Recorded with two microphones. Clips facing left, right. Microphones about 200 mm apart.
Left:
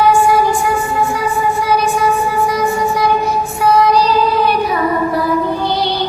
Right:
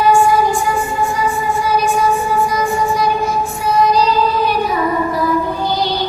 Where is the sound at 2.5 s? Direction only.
65° left (ahead or behind).